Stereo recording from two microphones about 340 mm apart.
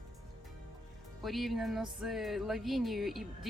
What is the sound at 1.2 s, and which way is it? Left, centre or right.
Speech, centre.